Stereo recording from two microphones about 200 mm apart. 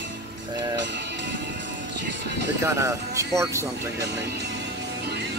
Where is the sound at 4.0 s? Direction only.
55° right (ahead or behind).